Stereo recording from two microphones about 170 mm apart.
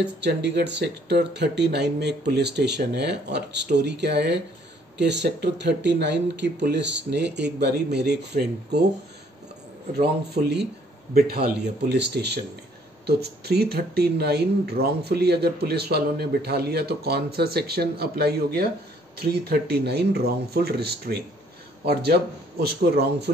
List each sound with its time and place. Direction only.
0.0 s speech: 85° right
9.9 s speech: 70° right (ahead or behind)
11.1 s a man's voice: 60° right (ahead or behind)
11.9 s speech: 80° right